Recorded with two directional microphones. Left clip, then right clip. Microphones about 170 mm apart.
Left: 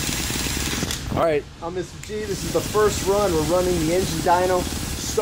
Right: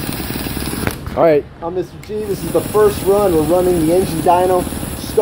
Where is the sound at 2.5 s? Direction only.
5° right (ahead or behind).